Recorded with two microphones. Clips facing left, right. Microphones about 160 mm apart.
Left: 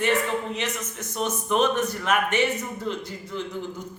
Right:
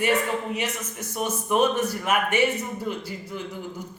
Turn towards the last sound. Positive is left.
turn(degrees=-10)  # may be behind; listen again after turning